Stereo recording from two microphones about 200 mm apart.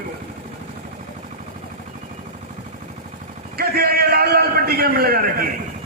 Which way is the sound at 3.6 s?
50° right (ahead or behind).